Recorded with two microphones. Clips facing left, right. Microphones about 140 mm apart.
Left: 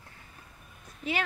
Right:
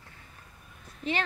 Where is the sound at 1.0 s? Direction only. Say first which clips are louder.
Right 1 dB; 5° left (ahead or behind).